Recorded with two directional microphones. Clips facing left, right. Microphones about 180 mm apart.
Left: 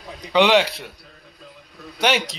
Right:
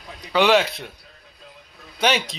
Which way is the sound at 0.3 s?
20° left (ahead or behind).